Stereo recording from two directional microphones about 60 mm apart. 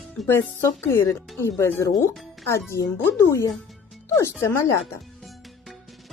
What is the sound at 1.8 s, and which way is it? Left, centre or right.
Speech, left.